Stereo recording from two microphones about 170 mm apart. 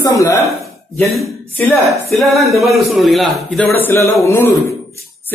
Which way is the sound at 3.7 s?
15° left (ahead or behind).